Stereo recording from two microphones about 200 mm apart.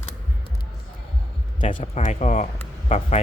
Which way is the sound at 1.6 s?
35° left (ahead or behind).